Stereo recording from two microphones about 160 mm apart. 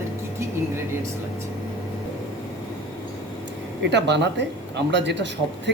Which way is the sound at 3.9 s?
90° right.